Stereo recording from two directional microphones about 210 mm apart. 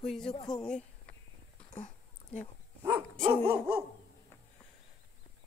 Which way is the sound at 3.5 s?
10° right (ahead or behind).